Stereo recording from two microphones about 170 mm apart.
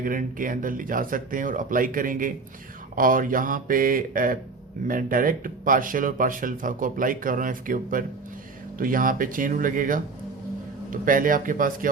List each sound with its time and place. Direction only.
0.0 s speech: 55° right (ahead or behind)